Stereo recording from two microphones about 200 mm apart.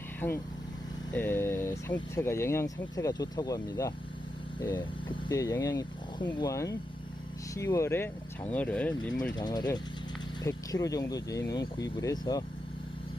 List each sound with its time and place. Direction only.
0.2 s speech: 10° left (ahead or behind)
5.0 s speech: 15° left (ahead or behind)
9.4 s speech: 20° left (ahead or behind)